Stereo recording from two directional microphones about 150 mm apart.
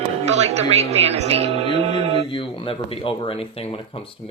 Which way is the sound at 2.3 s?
35° left (ahead or behind).